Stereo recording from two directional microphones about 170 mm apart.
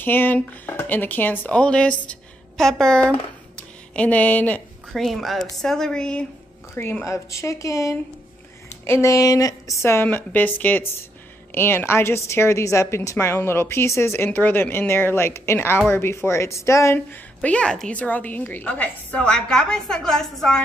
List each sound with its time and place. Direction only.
0.0 s a woman's voice: 10° left (ahead or behind)